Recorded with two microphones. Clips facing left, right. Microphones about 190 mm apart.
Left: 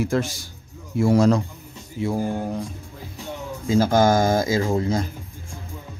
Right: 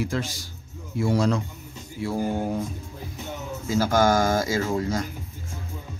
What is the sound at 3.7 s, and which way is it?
Speech, 25° left (ahead or behind).